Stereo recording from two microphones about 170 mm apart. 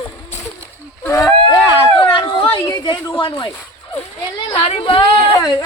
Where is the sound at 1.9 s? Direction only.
30° left (ahead or behind).